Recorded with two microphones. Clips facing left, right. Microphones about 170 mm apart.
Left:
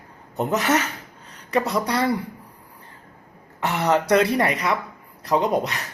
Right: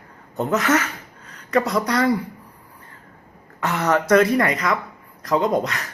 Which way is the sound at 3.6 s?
15° left (ahead or behind).